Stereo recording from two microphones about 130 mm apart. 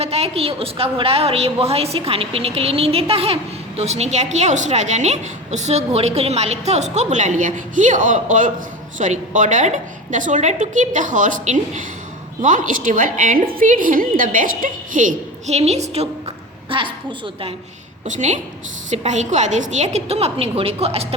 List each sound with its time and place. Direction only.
0.0 s a woman's voice: 50° right (ahead or behind)
16.6 s a woman's voice: 40° right (ahead or behind)
18.0 s a woman's voice: 65° right (ahead or behind)